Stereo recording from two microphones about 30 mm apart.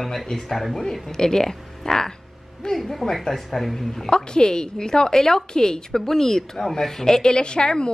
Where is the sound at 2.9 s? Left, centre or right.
Centre.